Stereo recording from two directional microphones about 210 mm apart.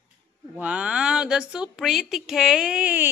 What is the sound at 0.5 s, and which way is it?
A woman's voice, 5° right (ahead or behind).